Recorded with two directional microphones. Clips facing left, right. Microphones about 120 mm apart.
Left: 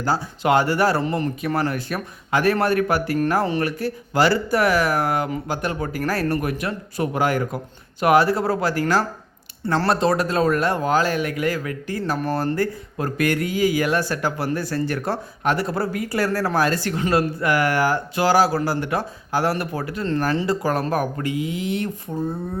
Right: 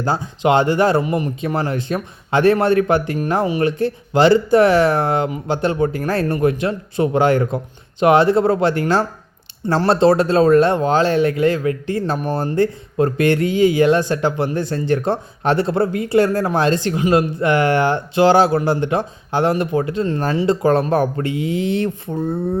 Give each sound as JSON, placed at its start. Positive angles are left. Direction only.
{"t": 0.0, "sound": "speech", "side_deg": -25}